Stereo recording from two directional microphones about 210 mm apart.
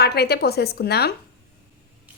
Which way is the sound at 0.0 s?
50° left (ahead or behind).